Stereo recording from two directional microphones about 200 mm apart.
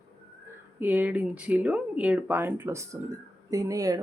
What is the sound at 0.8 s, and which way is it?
Speech, 10° right (ahead or behind).